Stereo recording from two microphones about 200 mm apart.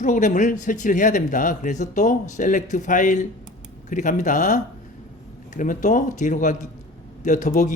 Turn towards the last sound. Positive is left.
turn(degrees=40)  # may be behind; listen again after turning